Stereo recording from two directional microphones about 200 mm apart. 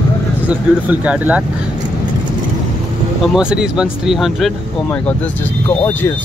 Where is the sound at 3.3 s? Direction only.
5° right (ahead or behind).